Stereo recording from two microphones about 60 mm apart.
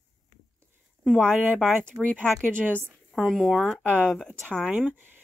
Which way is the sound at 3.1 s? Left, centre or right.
Centre.